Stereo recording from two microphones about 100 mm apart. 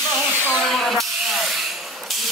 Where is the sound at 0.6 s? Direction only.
Centre (ahead or behind).